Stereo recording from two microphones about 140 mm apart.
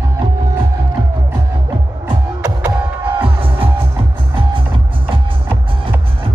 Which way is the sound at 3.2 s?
40° right (ahead or behind).